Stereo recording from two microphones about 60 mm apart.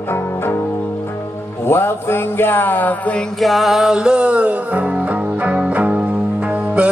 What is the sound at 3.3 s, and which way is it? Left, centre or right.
Music, centre.